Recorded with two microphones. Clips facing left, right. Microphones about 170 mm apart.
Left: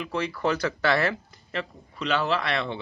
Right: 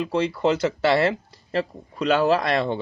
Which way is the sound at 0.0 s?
30° right (ahead or behind).